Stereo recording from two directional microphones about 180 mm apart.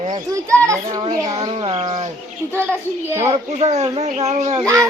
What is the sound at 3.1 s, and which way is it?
Speech, 15° right (ahead or behind).